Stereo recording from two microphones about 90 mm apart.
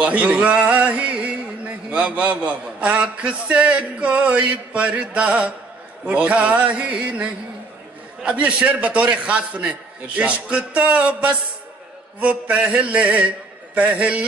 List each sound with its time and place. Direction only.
0.0 s a man's voice: 15° right (ahead or behind)